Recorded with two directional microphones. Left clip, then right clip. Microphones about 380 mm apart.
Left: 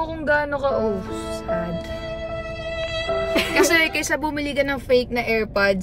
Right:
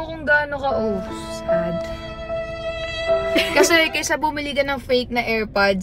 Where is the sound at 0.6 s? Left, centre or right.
Centre.